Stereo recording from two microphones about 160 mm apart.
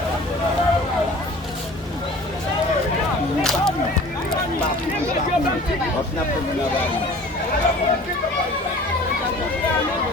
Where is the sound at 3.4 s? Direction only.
5° left (ahead or behind).